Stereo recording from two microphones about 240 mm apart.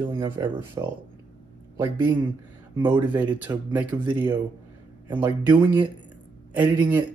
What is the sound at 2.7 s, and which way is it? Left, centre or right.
Speech, centre.